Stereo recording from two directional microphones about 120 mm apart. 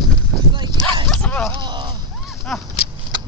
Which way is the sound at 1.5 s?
40° right (ahead or behind).